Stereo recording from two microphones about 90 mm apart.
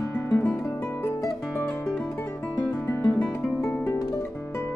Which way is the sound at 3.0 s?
10° left (ahead or behind).